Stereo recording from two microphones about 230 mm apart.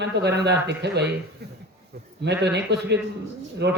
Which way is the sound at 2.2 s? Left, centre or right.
Right.